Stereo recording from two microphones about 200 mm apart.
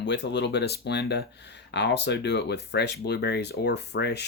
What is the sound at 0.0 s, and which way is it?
Speech, 60° left (ahead or behind).